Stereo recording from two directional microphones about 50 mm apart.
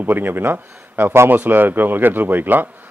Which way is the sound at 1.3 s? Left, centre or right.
Right.